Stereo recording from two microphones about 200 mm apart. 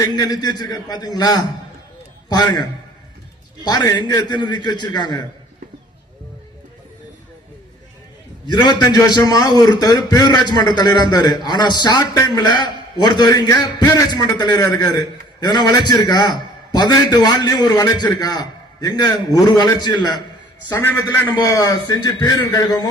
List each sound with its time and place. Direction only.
0.0 s a man's voice: 20° left (ahead or behind)
8.4 s a man's voice: 20° left (ahead or behind)